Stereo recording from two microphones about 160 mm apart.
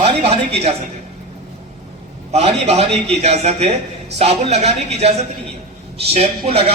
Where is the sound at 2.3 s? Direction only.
40° right (ahead or behind).